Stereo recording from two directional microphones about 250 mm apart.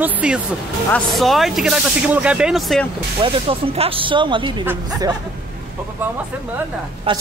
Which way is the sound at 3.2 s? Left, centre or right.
Right.